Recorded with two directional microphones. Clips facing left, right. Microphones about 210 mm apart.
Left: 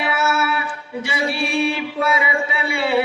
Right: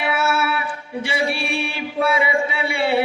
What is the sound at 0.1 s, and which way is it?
Music, 30° right (ahead or behind).